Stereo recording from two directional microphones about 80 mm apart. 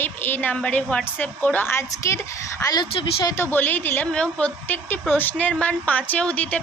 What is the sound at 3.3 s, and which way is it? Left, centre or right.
Speech, left.